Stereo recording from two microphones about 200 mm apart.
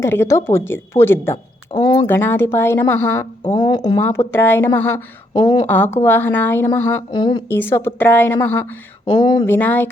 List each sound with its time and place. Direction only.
0.0 s a woman's voice: 15° left (ahead or behind)
5.3 s speech: 20° left (ahead or behind)
5.6 s a woman's voice: 10° left (ahead or behind)
7.1 s speech: 20° left (ahead or behind)
7.5 s a woman's voice: 10° left (ahead or behind)
9.0 s speech: 25° left (ahead or behind)
9.5 s a woman's voice: 10° left (ahead or behind)